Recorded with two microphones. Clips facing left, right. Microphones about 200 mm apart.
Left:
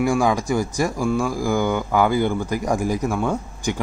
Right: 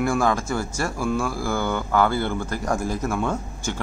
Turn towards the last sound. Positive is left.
turn(degrees=10)  # may be behind; listen again after turning